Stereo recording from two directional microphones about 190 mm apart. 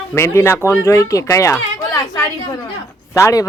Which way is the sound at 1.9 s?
15° left (ahead or behind).